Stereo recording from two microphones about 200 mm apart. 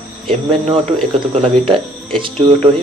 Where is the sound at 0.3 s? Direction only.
25° right (ahead or behind).